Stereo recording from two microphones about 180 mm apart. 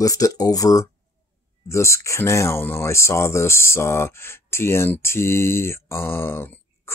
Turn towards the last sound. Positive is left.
turn(degrees=10)  # may be behind; listen again after turning